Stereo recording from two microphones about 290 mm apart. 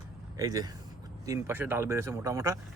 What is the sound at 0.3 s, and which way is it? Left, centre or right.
Speech, centre.